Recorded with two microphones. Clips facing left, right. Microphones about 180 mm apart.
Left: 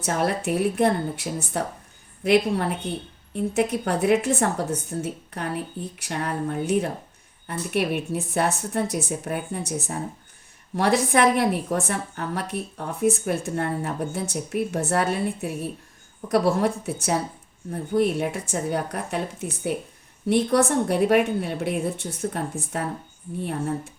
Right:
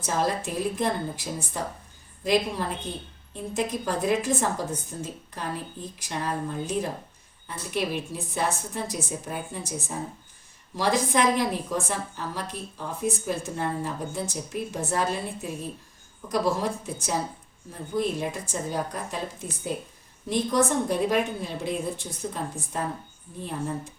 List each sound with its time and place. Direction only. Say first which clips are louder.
0.0 s a woman's voice: left 2 dB; 65° left (ahead or behind)